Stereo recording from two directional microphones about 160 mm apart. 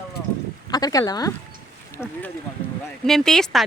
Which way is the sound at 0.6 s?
25° left (ahead or behind).